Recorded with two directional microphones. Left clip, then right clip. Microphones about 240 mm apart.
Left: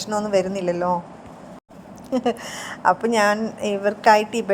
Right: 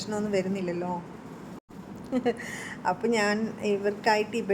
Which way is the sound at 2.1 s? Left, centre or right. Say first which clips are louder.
Left 6 dB; centre.